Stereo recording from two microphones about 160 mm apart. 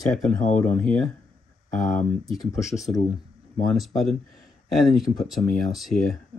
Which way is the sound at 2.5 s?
20° left (ahead or behind).